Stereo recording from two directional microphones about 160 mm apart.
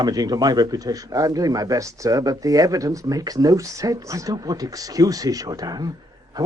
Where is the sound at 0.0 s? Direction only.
25° right (ahead or behind).